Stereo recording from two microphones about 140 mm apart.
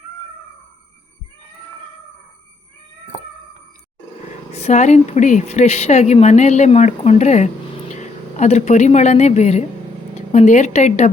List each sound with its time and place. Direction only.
4.5 s a woman's voice: 55° left (ahead or behind)